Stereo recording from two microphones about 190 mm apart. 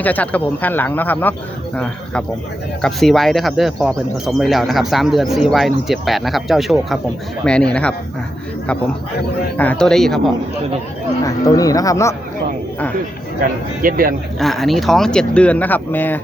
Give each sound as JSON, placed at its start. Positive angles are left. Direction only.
{"t": 0.0, "sound": "a man's voice", "side_deg": 10}
{"t": 9.6, "sound": "speech", "side_deg": 5}
{"t": 11.2, "sound": "a man's voice", "side_deg": 20}
{"t": 13.8, "sound": "a man's voice", "side_deg": -50}
{"t": 14.3, "sound": "speech", "side_deg": 0}